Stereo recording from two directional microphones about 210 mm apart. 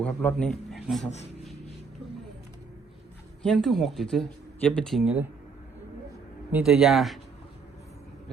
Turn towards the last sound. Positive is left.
turn(degrees=0)  # may be behind; listen again after turning